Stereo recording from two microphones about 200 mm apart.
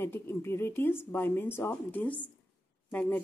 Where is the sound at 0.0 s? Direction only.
10° left (ahead or behind).